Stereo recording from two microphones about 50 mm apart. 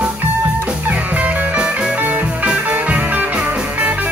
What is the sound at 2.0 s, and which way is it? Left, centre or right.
Music, right.